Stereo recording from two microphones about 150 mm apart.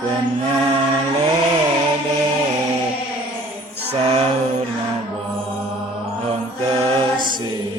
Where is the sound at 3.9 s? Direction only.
40° right (ahead or behind).